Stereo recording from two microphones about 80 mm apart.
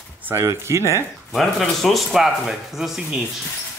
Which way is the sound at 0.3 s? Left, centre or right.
Right.